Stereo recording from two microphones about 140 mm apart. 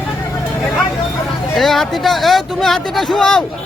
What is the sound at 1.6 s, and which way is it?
Speech, centre (ahead or behind).